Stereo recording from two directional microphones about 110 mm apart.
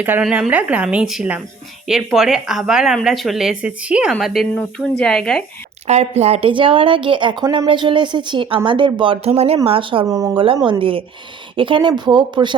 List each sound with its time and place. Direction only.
0.0 s a woman's voice: 10° right (ahead or behind)
4.2 s speech: centre (ahead or behind)
5.9 s speech: 85° right; by 9.1 s 45° right (ahead or behind)
9.2 s speech: 65° right (ahead or behind)
9.6 s speech: 55° right (ahead or behind)
10.1 s speech: 30° right (ahead or behind)
10.3 s speech: 50° right (ahead or behind)